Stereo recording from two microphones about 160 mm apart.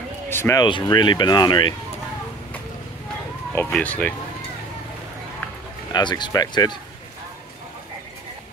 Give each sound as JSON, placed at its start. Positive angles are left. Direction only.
{"t": 0.3, "sound": "speech", "side_deg": 15}
{"t": 0.7, "sound": "speech", "side_deg": 30}
{"t": 3.5, "sound": "speech", "side_deg": 10}
{"t": 5.9, "sound": "speech", "side_deg": 25}